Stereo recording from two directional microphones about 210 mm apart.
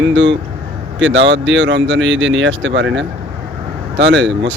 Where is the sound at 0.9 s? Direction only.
60° right (ahead or behind).